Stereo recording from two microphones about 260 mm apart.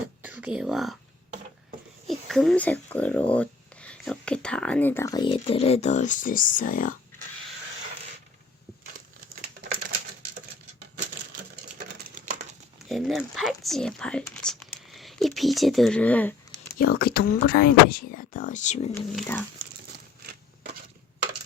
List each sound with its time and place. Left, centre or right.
0.2 s speech: centre
2.0 s speech: centre; by 6.9 s left
12.0 s a sound: right
12.9 s speech: centre
16.7 s speech: left
18.9 s speech: centre